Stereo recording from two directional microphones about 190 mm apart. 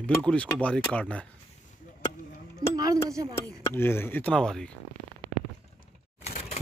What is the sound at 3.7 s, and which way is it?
Speech, 10° left (ahead or behind).